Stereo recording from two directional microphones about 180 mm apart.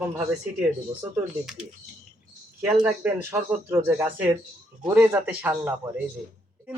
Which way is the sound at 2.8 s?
10° right (ahead or behind).